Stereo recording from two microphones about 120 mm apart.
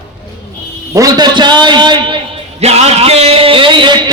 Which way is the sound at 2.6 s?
60° right (ahead or behind).